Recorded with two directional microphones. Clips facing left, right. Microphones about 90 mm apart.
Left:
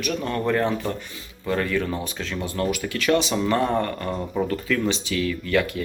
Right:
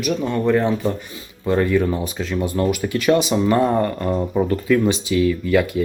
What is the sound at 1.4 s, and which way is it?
Speech, 20° right (ahead or behind).